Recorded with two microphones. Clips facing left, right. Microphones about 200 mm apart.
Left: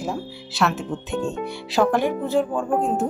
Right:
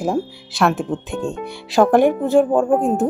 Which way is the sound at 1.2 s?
Centre (ahead or behind).